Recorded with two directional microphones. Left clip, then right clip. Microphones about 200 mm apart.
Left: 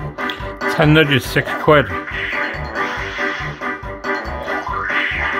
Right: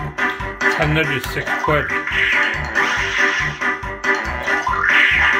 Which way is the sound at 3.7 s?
Centre (ahead or behind).